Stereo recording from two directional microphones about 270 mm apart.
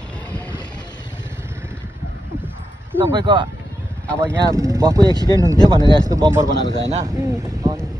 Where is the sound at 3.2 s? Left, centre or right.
Centre.